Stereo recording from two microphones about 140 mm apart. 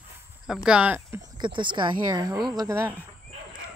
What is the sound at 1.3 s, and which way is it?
Speech, 35° right (ahead or behind).